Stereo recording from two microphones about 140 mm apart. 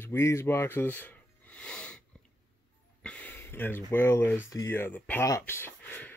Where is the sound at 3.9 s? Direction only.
15° left (ahead or behind).